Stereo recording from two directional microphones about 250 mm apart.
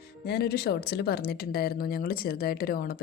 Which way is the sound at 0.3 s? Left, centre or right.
Left.